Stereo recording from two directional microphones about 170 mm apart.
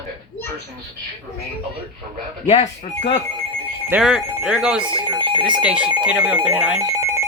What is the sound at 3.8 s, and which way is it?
Speech, 5° right (ahead or behind).